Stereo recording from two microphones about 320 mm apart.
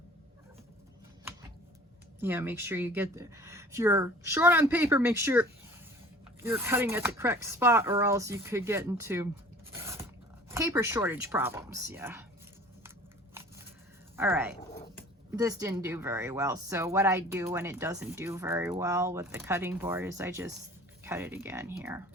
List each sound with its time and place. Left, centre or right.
2.2 s speech: centre
9.8 s zipper: centre
10.5 s speech: centre
14.2 s speech: centre